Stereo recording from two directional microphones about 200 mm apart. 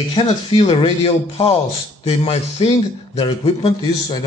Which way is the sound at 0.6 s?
30° left (ahead or behind).